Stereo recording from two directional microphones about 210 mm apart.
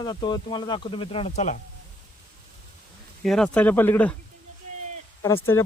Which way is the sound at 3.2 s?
Centre (ahead or behind).